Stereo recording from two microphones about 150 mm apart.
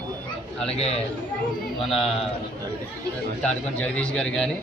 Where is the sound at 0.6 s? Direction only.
45° left (ahead or behind).